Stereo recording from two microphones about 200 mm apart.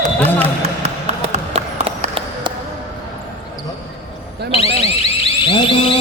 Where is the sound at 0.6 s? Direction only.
30° right (ahead or behind).